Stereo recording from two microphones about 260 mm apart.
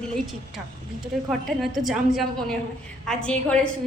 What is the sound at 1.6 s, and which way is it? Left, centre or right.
A woman's voice, centre.